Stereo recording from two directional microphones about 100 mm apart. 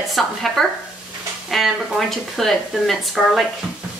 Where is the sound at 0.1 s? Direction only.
Centre (ahead or behind).